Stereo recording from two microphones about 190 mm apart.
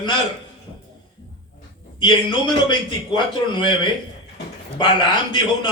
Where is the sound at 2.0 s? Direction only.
25° left (ahead or behind).